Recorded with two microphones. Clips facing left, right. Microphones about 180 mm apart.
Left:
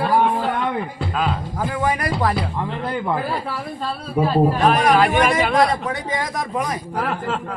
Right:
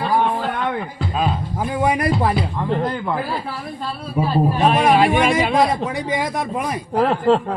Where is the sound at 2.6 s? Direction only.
40° right (ahead or behind).